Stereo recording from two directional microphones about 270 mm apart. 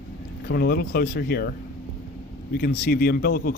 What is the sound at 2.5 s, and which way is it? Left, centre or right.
Speech, left.